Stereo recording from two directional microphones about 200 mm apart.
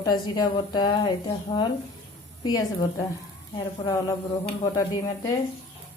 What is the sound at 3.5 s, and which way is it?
Speech, 20° left (ahead or behind).